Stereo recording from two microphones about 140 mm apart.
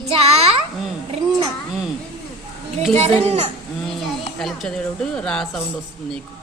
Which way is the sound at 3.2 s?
50° right (ahead or behind).